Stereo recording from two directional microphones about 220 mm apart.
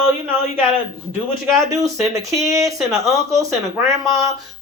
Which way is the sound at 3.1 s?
15° right (ahead or behind).